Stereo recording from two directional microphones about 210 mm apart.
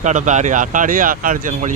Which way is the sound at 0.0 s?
35° right (ahead or behind).